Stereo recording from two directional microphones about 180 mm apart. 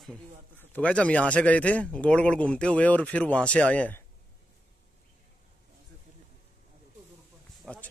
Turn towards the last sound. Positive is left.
turn(degrees=5)  # may be behind; listen again after turning